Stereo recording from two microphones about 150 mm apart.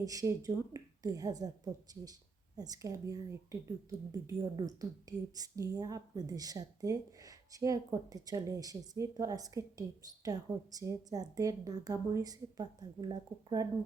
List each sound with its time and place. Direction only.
0.0 s speech: 25° right (ahead or behind)